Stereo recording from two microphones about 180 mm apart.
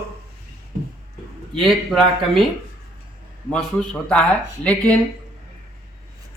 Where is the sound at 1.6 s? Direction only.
Centre (ahead or behind).